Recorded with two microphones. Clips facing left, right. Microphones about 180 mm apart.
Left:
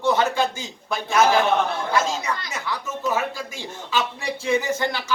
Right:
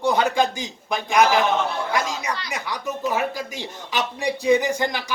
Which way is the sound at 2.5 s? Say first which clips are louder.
Right 1 dB; 15° right (ahead or behind).